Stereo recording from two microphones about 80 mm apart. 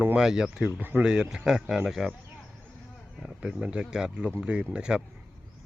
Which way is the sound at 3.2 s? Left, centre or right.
Centre.